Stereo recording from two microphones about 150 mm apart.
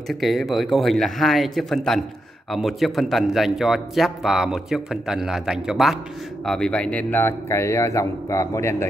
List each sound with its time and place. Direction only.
0.2 s a man's voice: centre (ahead or behind); by 8.8 s 20° left (ahead or behind)